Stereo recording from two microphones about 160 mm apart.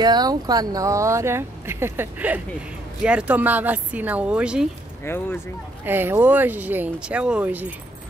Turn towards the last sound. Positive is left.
turn(degrees=-10)  # may be behind; listen again after turning